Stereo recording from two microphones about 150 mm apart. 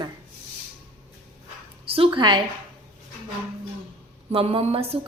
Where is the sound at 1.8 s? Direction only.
40° right (ahead or behind).